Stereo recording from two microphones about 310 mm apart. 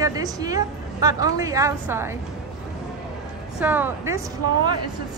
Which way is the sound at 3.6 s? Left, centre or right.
Centre.